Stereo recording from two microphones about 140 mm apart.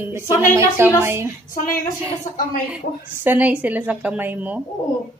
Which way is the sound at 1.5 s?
80° left.